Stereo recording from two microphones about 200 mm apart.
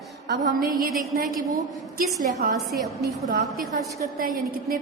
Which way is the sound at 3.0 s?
55° right (ahead or behind).